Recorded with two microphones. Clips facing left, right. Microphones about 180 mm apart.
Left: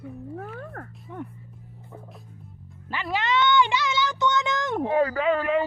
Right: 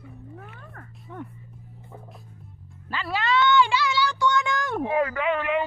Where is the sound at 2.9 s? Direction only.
20° left (ahead or behind).